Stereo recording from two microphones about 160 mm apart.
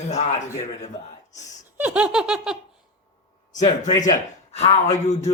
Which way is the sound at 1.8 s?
10° right (ahead or behind).